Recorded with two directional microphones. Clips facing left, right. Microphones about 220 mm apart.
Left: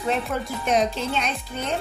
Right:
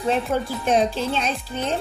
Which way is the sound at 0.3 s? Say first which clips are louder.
Right 3 dB; 30° right (ahead or behind).